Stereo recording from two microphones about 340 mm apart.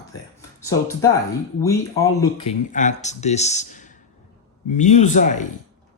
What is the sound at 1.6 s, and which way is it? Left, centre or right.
Speech, centre.